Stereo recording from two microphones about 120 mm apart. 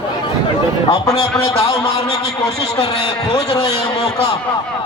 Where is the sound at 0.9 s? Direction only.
30° left (ahead or behind).